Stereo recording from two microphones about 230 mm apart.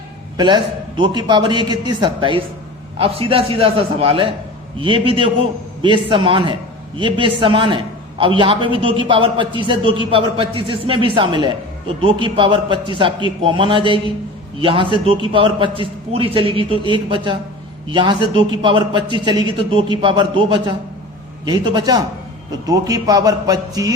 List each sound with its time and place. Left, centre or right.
0.3 s a man's voice: centre